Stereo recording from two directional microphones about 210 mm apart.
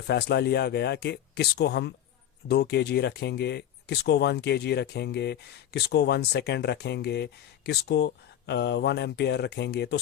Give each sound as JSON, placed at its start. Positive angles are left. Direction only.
{"t": 0.1, "sound": "speech", "side_deg": 50}